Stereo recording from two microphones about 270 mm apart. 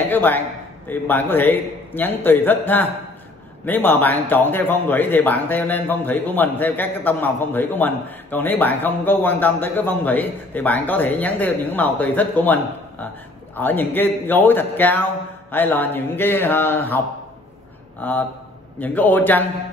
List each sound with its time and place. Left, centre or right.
0.0 s a man's voice: centre
13.6 s a man's voice: centre
18.0 s a man's voice: centre